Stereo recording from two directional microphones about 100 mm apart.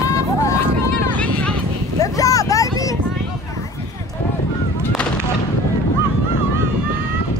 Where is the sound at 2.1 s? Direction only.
35° left (ahead or behind).